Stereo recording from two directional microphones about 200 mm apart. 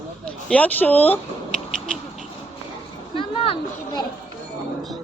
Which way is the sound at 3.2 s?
25° left (ahead or behind).